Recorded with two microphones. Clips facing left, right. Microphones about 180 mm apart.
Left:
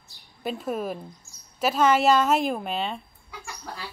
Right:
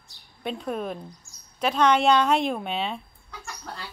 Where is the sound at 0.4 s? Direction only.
5° left (ahead or behind).